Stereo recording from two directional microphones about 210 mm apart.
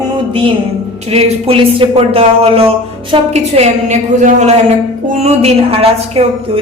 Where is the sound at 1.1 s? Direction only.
25° right (ahead or behind).